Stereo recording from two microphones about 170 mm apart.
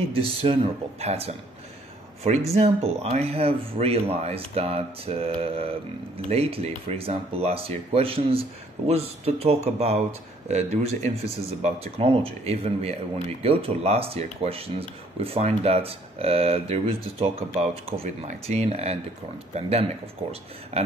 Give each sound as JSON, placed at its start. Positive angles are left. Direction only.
{"t": 0.1, "sound": "speech", "side_deg": -35}
{"t": 2.5, "sound": "speech", "side_deg": -35}